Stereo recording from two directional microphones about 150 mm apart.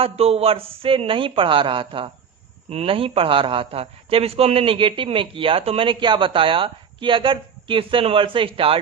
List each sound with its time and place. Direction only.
0.0 s a man's voice: 40° right (ahead or behind)